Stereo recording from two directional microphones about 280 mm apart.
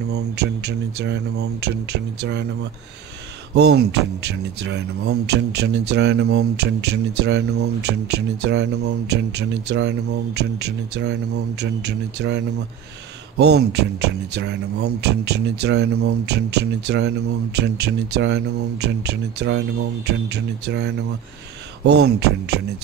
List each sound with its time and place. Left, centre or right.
0.1 s speech: right
3.5 s speech: right